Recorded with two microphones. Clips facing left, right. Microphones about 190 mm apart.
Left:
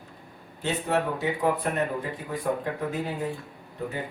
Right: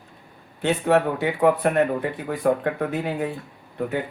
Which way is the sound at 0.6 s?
65° right (ahead or behind).